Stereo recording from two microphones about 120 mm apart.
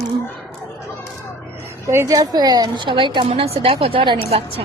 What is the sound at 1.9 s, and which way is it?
A woman's voice, 25° right (ahead or behind).